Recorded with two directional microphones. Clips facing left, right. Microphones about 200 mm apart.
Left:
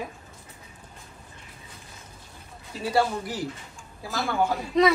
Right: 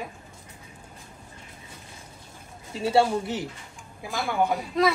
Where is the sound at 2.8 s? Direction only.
25° right (ahead or behind).